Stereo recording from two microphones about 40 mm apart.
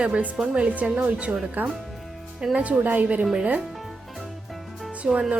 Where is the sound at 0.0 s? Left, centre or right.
Right.